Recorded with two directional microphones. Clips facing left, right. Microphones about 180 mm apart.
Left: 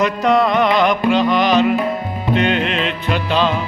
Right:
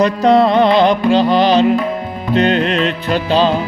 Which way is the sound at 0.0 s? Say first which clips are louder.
Right 4 dB; 30° right (ahead or behind).